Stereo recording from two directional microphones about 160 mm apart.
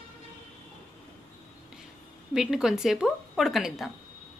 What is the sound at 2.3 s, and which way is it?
Speech, 5° right (ahead or behind).